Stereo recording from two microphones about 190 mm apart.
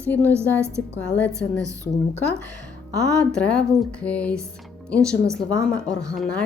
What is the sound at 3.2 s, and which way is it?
A woman's voice, 5° left (ahead or behind).